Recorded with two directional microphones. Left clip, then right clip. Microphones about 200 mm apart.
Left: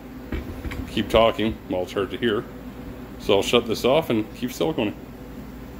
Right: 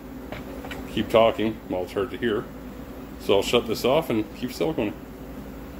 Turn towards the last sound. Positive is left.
turn(degrees=25)  # may be behind; listen again after turning